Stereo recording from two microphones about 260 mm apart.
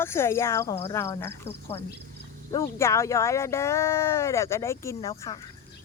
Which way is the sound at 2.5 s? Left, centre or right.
Centre.